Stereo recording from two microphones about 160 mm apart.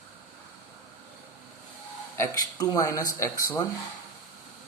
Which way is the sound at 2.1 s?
20° left (ahead or behind).